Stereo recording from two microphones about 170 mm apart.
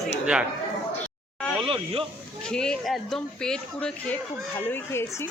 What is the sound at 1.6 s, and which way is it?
Speech, 30° right (ahead or behind).